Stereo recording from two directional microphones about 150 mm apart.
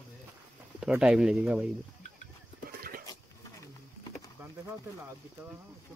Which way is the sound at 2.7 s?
80° right.